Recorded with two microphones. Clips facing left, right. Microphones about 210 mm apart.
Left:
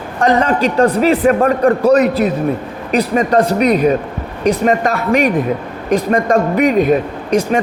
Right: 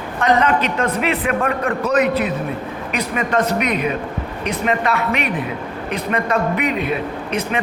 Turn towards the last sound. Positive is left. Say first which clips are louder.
# left 7 dB
turn(degrees=40)  # may be behind; listen again after turning